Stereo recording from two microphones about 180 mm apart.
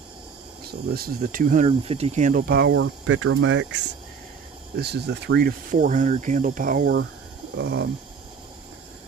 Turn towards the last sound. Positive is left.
turn(degrees=-70)  # may be behind; listen again after turning